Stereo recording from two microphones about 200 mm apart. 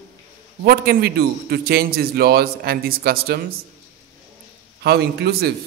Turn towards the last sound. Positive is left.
turn(degrees=-55)  # may be behind; listen again after turning